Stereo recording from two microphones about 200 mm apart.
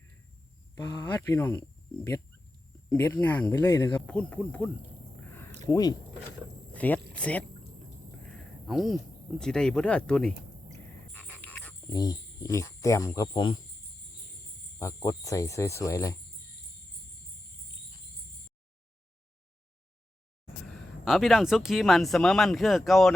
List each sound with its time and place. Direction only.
0.8 s speech: 15° left (ahead or behind)
5.7 s speech: 20° left (ahead or behind)
6.7 s speech: 10° left (ahead or behind)
7.1 s a sound: 5° left (ahead or behind)
9.4 s speech: 5° left (ahead or behind)
11.1 s a sound: 10° left (ahead or behind)
11.9 s speech: 15° left (ahead or behind)
14.8 s speech: 15° left (ahead or behind)
21.0 s speech: centre (ahead or behind)